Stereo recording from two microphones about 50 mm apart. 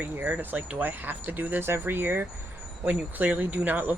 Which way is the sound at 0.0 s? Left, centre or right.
Right.